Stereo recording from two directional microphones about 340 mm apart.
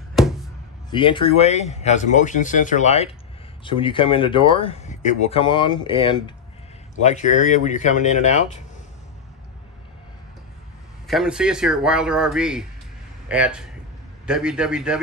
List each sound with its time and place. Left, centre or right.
0.1 s a sound: centre
0.8 s a man's voice: centre
11.1 s speech: centre